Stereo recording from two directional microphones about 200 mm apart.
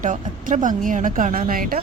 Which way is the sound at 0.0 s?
40° right (ahead or behind).